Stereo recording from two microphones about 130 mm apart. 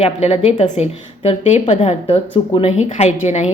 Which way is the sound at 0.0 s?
50° left (ahead or behind).